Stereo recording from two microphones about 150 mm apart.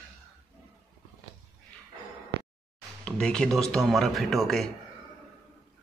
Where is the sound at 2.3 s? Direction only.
90° right.